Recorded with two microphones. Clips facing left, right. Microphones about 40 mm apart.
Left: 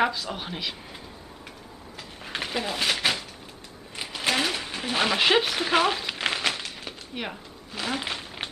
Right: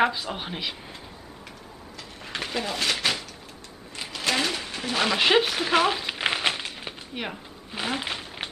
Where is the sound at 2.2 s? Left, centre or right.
Centre.